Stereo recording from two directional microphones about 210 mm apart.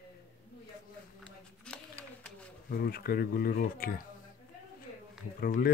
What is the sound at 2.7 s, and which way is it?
A man's voice, 45° left (ahead or behind).